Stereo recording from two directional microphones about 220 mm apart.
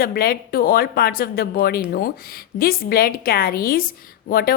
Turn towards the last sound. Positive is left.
turn(degrees=45)  # may be behind; listen again after turning